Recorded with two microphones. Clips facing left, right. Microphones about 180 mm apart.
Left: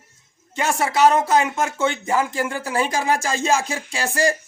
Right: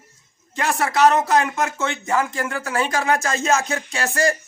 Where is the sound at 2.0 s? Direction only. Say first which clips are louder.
Left 1 dB; 25° left (ahead or behind).